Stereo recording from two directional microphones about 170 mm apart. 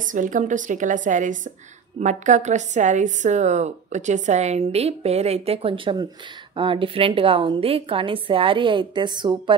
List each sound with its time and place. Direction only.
0.0 s a woman's voice: 50° right (ahead or behind); by 9.6 s 25° right (ahead or behind)